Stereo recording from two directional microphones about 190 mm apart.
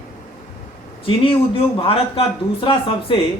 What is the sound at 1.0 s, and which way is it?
Speech, 30° left (ahead or behind).